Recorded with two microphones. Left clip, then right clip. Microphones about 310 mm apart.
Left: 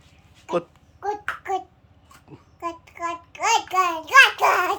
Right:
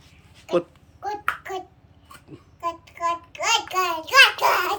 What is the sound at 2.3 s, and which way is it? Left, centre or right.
Child singing, centre.